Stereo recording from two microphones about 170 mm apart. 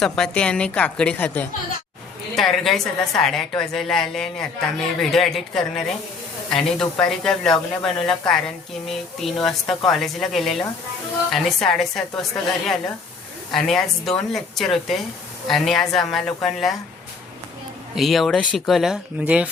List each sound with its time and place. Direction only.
0.0 s a woman's voice: 5° left (ahead or behind)
13.5 s speech: centre (ahead or behind)
17.9 s speech: centre (ahead or behind)